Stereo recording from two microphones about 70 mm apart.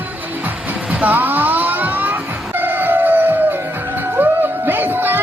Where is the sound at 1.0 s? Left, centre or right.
Right.